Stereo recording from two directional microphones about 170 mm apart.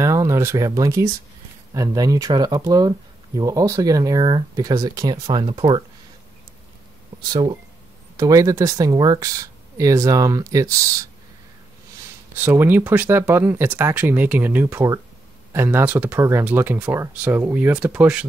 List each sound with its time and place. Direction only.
0.0 s a sound: 20° right (ahead or behind)
1.7 s speech: 20° right (ahead or behind)
7.2 s speech: 25° right (ahead or behind)
12.4 s speech: 10° right (ahead or behind)